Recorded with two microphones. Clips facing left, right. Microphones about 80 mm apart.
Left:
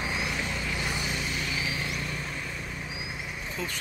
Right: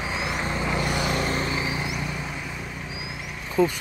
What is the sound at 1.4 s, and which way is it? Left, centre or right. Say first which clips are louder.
Vehicle: right 5 dB; right.